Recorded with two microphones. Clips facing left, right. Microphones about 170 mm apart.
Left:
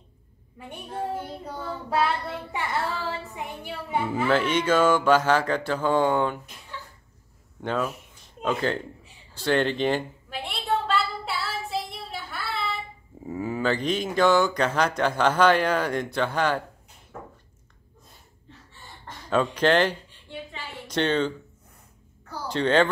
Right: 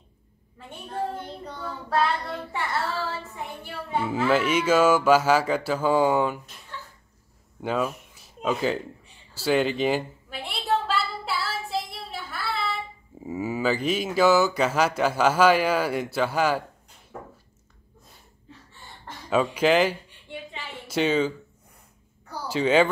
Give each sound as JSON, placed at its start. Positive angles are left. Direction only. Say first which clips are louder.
{"t": 0.6, "sound": "speech", "louder": "right 1 dB", "side_deg": 10}
{"t": 4.3, "sound": "speech", "louder": "right 1 dB", "side_deg": -5}
{"t": 7.6, "sound": "speech", "louder": "right 1 dB", "side_deg": -5}
{"t": 9.3, "sound": "a sound", "louder": "right 1 dB", "side_deg": -5}
{"t": 13.2, "sound": "speech", "louder": "right 1 dB", "side_deg": -5}
{"t": 19.2, "sound": "a sound", "louder": "even", "side_deg": -10}
{"t": 20.8, "sound": "a woman's voice", "louder": "right 1 dB", "side_deg": -5}
{"t": 22.3, "sound": "speech", "louder": "right 1 dB", "side_deg": -5}